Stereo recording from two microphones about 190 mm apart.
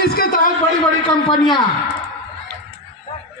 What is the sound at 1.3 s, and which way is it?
Speech, 25° left (ahead or behind).